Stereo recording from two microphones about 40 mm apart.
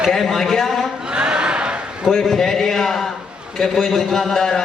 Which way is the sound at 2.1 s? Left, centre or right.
Centre.